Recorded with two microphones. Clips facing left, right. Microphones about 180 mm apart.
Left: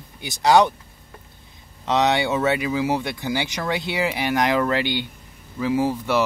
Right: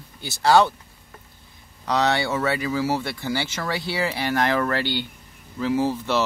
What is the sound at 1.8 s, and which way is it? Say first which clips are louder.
Speech: left 2 dB; 20° left (ahead or behind).